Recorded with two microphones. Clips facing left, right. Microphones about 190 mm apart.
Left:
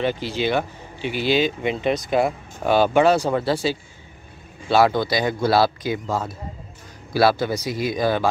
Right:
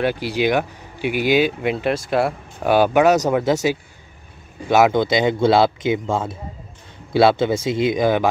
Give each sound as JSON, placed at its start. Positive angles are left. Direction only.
{"t": 0.0, "sound": "speech", "side_deg": -10}
{"t": 4.6, "sound": "speech", "side_deg": -20}